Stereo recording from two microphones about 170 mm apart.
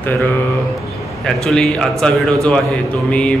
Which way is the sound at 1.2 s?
5° left (ahead or behind).